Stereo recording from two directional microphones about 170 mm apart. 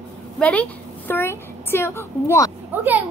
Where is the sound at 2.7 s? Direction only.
10° right (ahead or behind).